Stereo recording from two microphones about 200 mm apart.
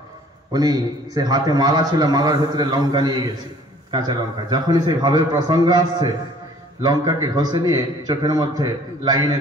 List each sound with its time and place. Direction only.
0.5 s a man's voice: 20° right (ahead or behind)